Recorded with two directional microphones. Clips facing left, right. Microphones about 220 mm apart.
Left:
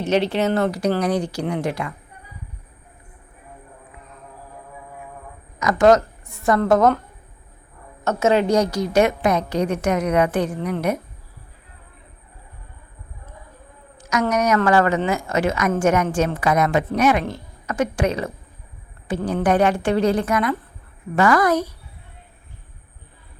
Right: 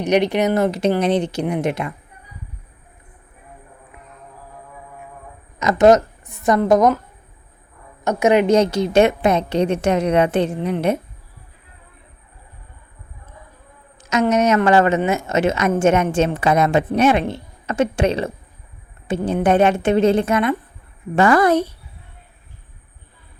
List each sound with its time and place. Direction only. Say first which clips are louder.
0.0 s a woman's voice: right 3 dB; 15° right (ahead or behind)
5.5 s a woman's voice: right 2 dB; 20° right (ahead or behind)
8.0 s a woman's voice: right 3 dB; 15° right (ahead or behind)
14.0 s a woman's voice: right 4 dB; 25° right (ahead or behind)